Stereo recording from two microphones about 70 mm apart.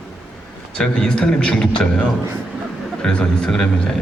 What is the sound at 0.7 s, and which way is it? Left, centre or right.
A man's voice, centre.